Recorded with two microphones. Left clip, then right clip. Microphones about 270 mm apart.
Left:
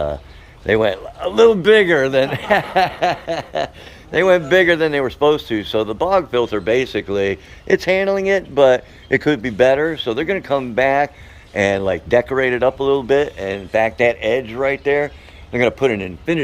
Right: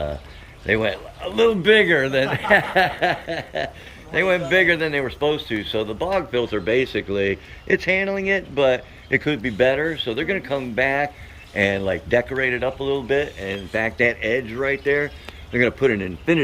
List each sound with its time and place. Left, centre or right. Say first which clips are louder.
0.6 s speech: left 5 dB; centre